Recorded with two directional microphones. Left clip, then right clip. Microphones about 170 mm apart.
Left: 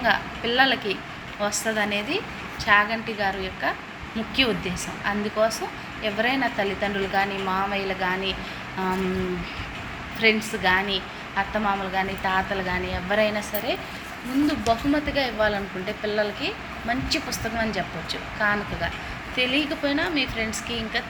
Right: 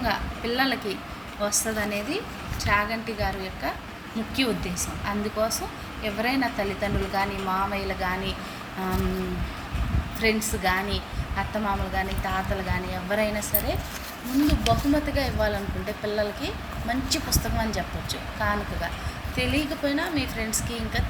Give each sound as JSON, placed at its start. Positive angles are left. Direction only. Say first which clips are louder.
{"t": 0.0, "sound": "speech", "louder": "left 5 dB", "side_deg": -10}
{"t": 10.2, "sound": "speech", "louder": "left 4 dB", "side_deg": -15}